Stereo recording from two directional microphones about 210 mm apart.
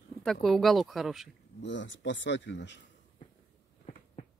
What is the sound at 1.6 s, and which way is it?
Speech, 60° left (ahead or behind).